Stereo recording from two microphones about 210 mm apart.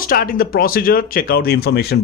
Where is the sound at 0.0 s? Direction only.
45° left (ahead or behind).